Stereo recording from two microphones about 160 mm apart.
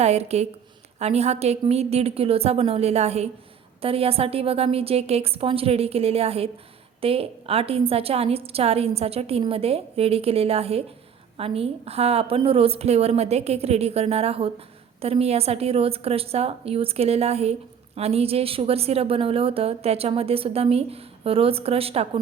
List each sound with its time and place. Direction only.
0.0 s a woman's voice: 40° right (ahead or behind)